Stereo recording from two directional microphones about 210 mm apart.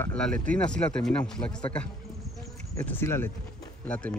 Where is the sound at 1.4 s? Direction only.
20° left (ahead or behind).